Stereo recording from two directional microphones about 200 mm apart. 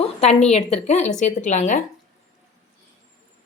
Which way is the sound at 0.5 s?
35° left (ahead or behind).